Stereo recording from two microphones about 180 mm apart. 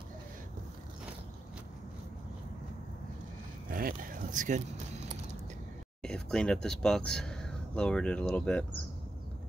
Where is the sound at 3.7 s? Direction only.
50° right (ahead or behind).